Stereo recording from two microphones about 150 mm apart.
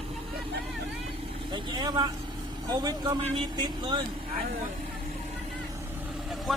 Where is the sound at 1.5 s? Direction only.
30° right (ahead or behind).